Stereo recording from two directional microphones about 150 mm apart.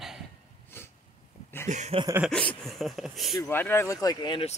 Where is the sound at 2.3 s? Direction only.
5° left (ahead or behind).